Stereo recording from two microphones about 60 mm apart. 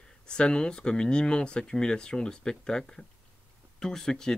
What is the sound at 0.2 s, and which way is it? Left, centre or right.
Speech, centre.